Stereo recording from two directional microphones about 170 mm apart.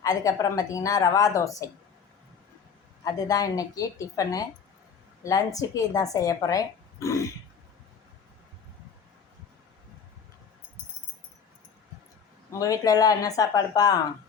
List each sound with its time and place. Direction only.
0.0 s speech: 20° left (ahead or behind)
3.0 s speech: 20° left (ahead or behind)
12.5 s speech: 20° left (ahead or behind)